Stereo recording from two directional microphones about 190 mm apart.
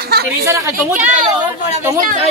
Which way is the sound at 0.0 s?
55° right (ahead or behind).